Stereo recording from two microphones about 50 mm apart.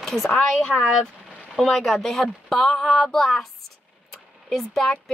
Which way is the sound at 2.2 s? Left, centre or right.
Centre.